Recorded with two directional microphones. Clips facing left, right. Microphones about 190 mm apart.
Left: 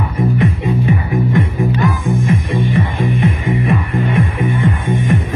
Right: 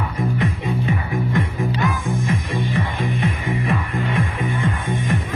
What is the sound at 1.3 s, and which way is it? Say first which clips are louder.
Music: left 5 dB; 20° left (ahead or behind).